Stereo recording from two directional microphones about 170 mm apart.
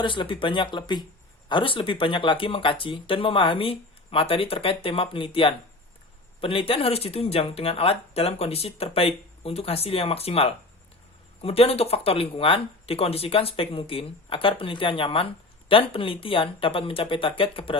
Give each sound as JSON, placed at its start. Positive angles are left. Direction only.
{"t": 0.0, "sound": "speech", "side_deg": 30}